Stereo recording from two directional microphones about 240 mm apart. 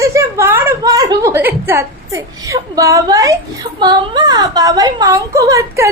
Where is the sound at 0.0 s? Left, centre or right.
Centre.